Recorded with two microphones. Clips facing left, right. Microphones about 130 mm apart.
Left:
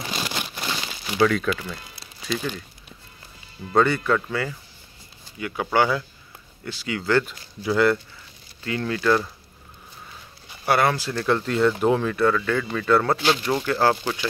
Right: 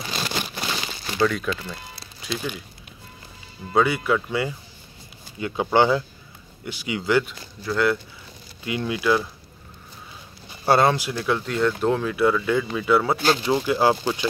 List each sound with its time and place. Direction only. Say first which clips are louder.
0.4 s crumpling: right 1 dB; 10° left (ahead or behind)
2.2 s speech: left 2 dB; 5° right (ahead or behind)
3.7 s speech: left 1 dB; 10° right (ahead or behind)
7.6 s speech: left 2 dB; centre (ahead or behind)
8.6 s speech: even; 15° right (ahead or behind)
10.6 s speech: right 2 dB; 25° right (ahead or behind)
11.1 s speech: left 2 dB; 5° right (ahead or behind)